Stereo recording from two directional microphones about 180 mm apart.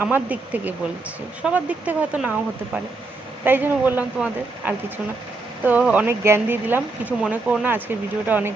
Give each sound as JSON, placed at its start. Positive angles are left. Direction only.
{"t": 0.0, "sound": "speech", "side_deg": -10}
{"t": 3.4, "sound": "speech", "side_deg": -10}